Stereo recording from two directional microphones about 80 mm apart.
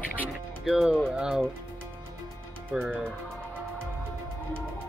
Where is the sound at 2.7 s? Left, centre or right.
Centre.